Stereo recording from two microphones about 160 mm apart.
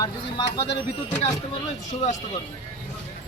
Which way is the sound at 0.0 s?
30° left (ahead or behind).